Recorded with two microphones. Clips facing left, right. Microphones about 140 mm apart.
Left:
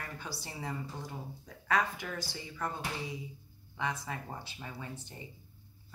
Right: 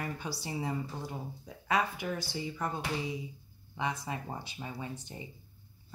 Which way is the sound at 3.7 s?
20° right (ahead or behind).